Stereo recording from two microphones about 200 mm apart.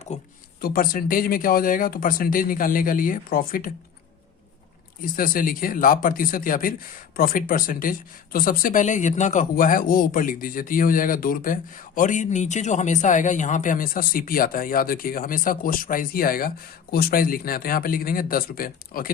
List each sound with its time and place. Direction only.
0.1 s speech: 35° left (ahead or behind)
0.6 s speech: 45° left (ahead or behind)
5.1 s speech: 45° left (ahead or behind)